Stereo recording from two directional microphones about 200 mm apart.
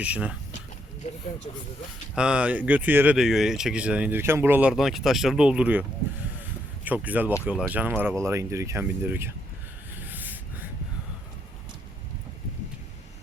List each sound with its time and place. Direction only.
0.0 s speech: 5° right (ahead or behind)
1.0 s speech: 35° left (ahead or behind)
2.1 s speech: 5° right (ahead or behind)
6.8 s speech: 10° right (ahead or behind)
9.9 s a sound: 10° right (ahead or behind)